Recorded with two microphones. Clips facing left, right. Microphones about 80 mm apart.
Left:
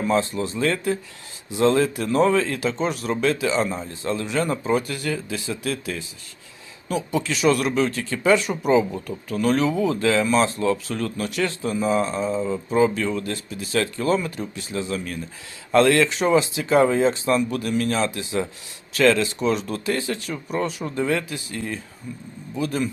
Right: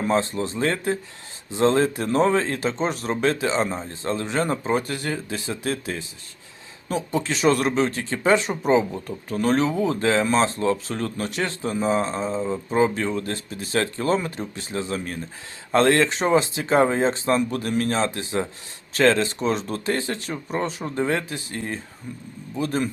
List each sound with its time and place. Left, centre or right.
0.0 s speech: right